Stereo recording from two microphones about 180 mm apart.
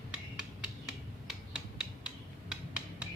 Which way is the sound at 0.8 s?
5° right (ahead or behind).